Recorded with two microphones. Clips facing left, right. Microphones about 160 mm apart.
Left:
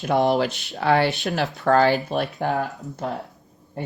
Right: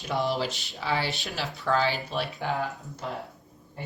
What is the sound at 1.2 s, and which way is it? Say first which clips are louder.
Speech: left 9 dB; 50° left (ahead or behind).